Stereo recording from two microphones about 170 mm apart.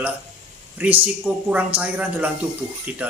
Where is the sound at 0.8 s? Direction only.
10° right (ahead or behind).